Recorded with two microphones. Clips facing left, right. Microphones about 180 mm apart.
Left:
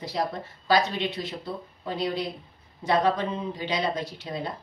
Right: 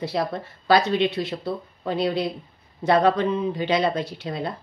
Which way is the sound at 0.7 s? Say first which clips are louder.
Right 5 dB; 65° right (ahead or behind).